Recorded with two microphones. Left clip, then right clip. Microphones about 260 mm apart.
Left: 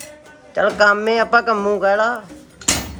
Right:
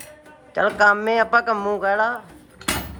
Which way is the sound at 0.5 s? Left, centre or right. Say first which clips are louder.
Left 2 dB; centre.